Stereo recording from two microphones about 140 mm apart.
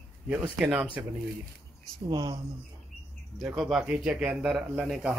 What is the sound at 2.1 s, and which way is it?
Speech, 30° right (ahead or behind).